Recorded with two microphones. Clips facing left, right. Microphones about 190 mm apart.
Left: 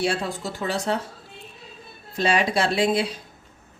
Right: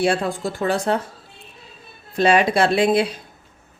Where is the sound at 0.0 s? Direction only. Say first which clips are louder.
Right 5 dB; 55° right (ahead or behind).